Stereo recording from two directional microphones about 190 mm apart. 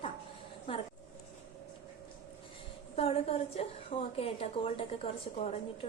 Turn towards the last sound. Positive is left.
turn(degrees=35)  # may be behind; listen again after turning